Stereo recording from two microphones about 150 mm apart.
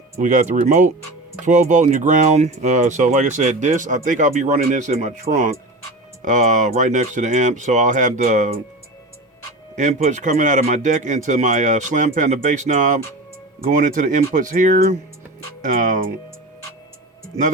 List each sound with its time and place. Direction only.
0.2 s speech: 55° right (ahead or behind)
9.7 s speech: 55° right (ahead or behind)